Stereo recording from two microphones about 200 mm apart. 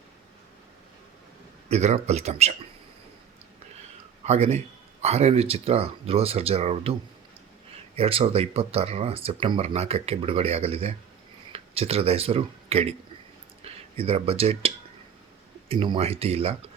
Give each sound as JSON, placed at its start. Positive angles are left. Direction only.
{"t": 1.7, "sound": "speech", "side_deg": -35}
{"t": 4.2, "sound": "speech", "side_deg": -35}
{"t": 7.9, "sound": "speech", "side_deg": -30}
{"t": 15.7, "sound": "speech", "side_deg": -25}